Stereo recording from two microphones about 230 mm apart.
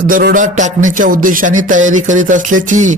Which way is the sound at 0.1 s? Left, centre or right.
Right.